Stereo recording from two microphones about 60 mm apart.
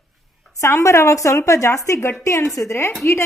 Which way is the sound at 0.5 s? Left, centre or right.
Left.